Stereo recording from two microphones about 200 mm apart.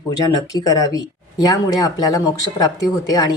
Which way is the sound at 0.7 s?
15° left (ahead or behind).